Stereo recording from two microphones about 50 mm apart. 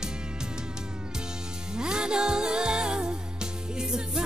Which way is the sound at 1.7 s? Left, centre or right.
Centre.